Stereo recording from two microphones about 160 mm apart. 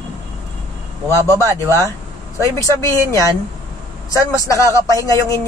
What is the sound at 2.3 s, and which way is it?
A man's voice, 20° left (ahead or behind).